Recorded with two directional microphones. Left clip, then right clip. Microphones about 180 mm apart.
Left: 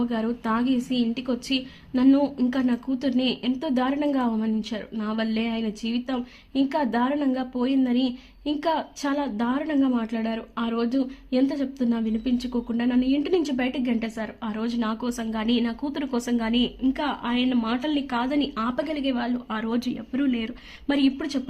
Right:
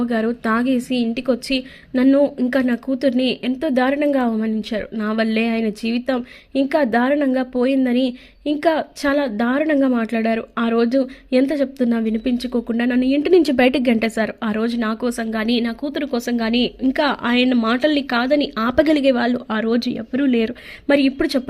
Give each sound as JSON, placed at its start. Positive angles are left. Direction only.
{"t": 0.0, "sound": "speech", "side_deg": -20}